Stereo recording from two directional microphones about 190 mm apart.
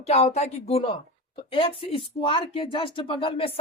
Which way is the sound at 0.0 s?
35° left (ahead or behind).